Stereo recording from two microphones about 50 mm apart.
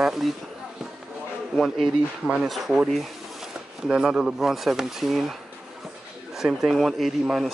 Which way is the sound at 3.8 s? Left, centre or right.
Centre.